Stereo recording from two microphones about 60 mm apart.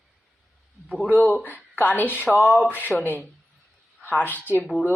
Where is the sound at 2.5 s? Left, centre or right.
Right.